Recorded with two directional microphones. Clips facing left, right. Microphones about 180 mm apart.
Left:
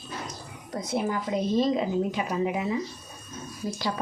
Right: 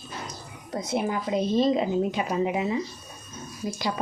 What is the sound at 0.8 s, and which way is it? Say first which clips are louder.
Speech: right 1 dB; 20° right (ahead or behind).